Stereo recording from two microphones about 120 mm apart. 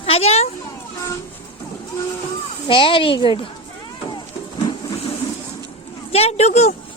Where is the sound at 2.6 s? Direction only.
45° left (ahead or behind).